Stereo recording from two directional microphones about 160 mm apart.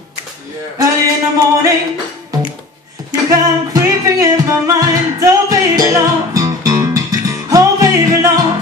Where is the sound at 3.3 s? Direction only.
20° right (ahead or behind).